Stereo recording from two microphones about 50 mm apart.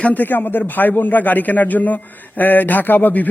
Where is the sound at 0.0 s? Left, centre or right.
Left.